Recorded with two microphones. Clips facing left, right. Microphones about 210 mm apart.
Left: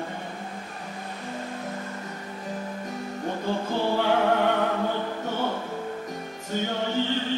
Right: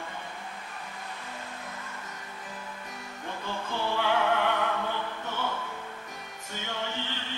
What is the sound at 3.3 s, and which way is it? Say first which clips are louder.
Music: left 7 dB; 40° left (ahead or behind).